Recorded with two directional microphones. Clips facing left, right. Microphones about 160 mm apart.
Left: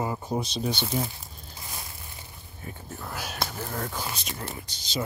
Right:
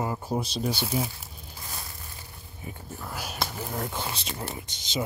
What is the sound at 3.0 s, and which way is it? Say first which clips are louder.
Whispering: even; 5° right (ahead or behind).